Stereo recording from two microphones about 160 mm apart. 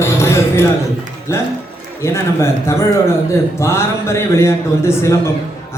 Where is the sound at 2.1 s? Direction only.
15° left (ahead or behind).